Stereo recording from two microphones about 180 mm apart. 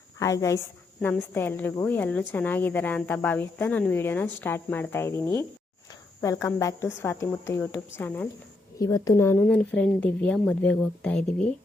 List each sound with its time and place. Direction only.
0.2 s speech: 15° left (ahead or behind)